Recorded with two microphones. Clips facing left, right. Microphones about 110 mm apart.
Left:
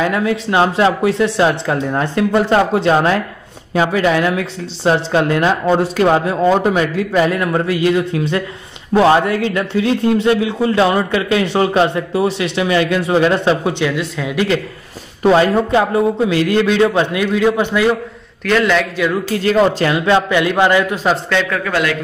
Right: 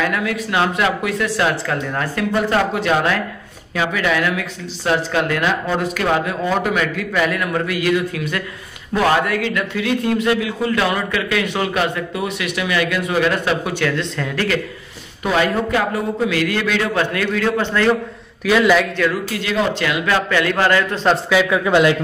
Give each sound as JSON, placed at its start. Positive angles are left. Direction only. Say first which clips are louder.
{"t": 0.0, "sound": "a man's voice", "louder": "left 4 dB", "side_deg": 25}
{"t": 13.8, "sound": "speech", "louder": "left 2 dB", "side_deg": 10}
{"t": 15.2, "sound": "a man's voice", "louder": "left 6 dB", "side_deg": 30}
{"t": 18.4, "sound": "a man's voice", "louder": "even", "side_deg": -5}
{"t": 19.3, "sound": "speech", "louder": "left 7 dB", "side_deg": 35}
{"t": 20.2, "sound": "speech", "louder": "left 3 dB", "side_deg": 20}
{"t": 21.3, "sound": "a man's voice", "louder": "right 1 dB", "side_deg": -5}
{"t": 21.6, "sound": "a man's voice", "louder": "right 4 dB", "side_deg": -20}